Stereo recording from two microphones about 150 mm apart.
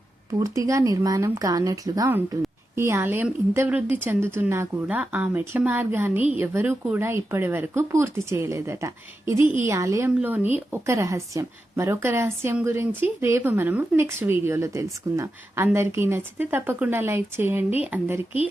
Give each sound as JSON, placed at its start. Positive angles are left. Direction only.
{"t": 0.3, "sound": "a woman's voice", "side_deg": -20}